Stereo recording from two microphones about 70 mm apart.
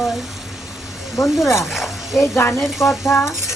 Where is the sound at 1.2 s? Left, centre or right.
Left.